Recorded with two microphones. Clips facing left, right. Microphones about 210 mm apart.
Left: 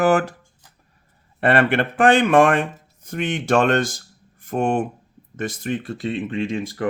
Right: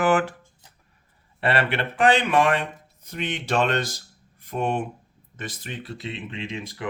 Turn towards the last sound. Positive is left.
turn(degrees=50)  # may be behind; listen again after turning